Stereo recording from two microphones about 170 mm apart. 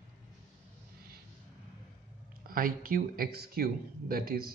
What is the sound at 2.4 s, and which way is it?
Speech, 60° right (ahead or behind).